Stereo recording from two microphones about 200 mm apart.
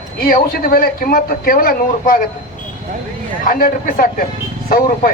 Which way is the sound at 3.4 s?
45° left (ahead or behind).